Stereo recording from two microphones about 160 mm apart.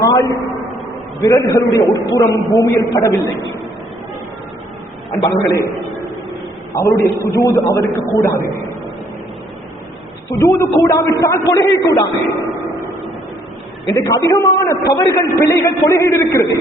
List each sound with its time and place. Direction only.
0.0 s a sound: 20° left (ahead or behind)
1.2 s a man's voice: 20° left (ahead or behind)
5.2 s a man's voice: 20° left (ahead or behind)
6.7 s a man's voice: 20° left (ahead or behind)
10.3 s a man's voice: 20° left (ahead or behind)
13.8 s a man's voice: 20° left (ahead or behind)